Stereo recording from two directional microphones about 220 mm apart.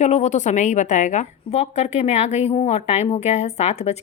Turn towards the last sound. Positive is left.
turn(degrees=30)  # may be behind; listen again after turning